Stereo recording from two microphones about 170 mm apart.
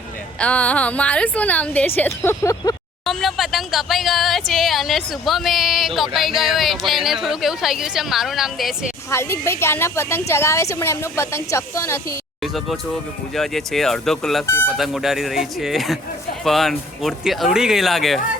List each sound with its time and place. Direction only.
0.3 s a woman's voice: 5° left (ahead or behind)
3.1 s speech: centre (ahead or behind)
9.0 s a woman's voice: 15° left (ahead or behind)
12.4 s speech: centre (ahead or behind)
14.4 s a woman's voice: 10° left (ahead or behind)
14.8 s speech: centre (ahead or behind)